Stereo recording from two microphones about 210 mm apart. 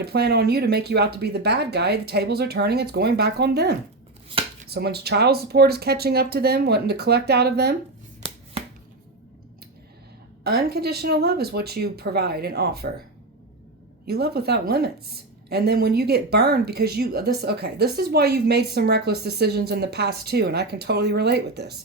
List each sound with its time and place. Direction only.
0.0 s a woman's voice: 50° right (ahead or behind)
4.3 s a sound: 25° right (ahead or behind)
4.7 s a woman's voice: 50° right (ahead or behind)
10.4 s a woman's voice: 50° right (ahead or behind)
14.0 s a woman's voice: 50° right (ahead or behind)